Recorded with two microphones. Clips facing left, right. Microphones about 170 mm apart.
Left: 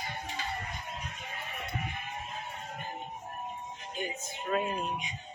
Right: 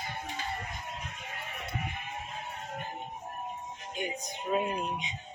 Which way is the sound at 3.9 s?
15° right (ahead or behind).